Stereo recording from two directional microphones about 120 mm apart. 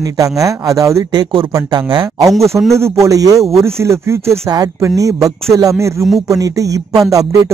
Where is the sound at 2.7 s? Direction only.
25° right (ahead or behind).